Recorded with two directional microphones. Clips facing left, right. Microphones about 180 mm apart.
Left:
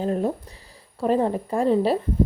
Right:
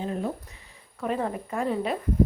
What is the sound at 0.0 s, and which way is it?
Speech, 40° left (ahead or behind).